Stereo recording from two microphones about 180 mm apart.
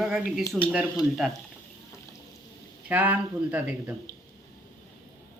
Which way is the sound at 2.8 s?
10° right (ahead or behind).